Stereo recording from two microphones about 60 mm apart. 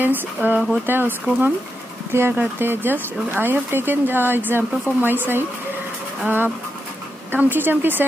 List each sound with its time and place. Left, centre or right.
0.0 s speech: right